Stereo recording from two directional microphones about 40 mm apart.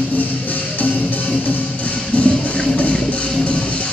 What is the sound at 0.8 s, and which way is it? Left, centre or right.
Music, left.